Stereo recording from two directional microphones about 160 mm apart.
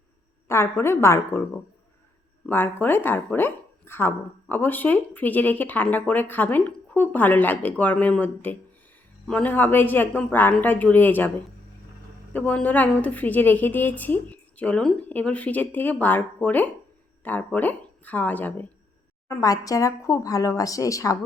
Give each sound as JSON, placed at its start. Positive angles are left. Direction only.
{"t": 0.4, "sound": "a woman's voice", "side_deg": 15}
{"t": 2.5, "sound": "speech", "side_deg": 10}
{"t": 12.3, "sound": "speech", "side_deg": 10}
{"t": 19.3, "sound": "speech", "side_deg": 20}